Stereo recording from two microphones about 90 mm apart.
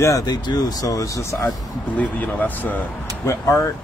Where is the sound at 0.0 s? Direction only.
45° left (ahead or behind).